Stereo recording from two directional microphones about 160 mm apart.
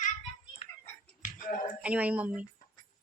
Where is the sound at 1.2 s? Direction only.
50° left (ahead or behind).